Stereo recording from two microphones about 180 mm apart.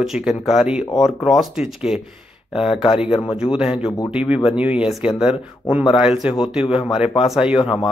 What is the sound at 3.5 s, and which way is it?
Speech, 5° right (ahead or behind).